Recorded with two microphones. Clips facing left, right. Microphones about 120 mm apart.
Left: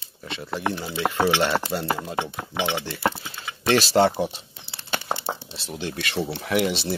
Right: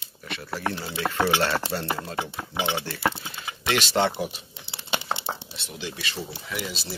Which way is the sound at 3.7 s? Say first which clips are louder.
Left 5 dB; 35° left (ahead or behind).